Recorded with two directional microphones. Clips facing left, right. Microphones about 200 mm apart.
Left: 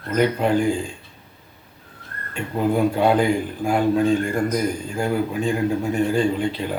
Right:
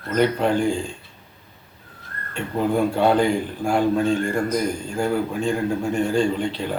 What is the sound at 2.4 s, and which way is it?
A man's voice, 5° left (ahead or behind).